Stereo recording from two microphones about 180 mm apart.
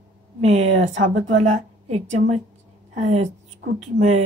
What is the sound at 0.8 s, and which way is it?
Speech, 90° right.